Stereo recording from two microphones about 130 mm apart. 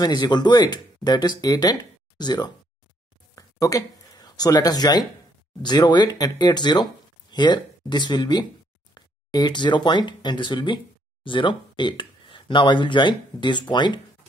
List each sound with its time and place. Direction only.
0.0 s speech: 35° left (ahead or behind)
3.3 s a sound: 25° left (ahead or behind)
5.6 s speech: 30° left (ahead or behind)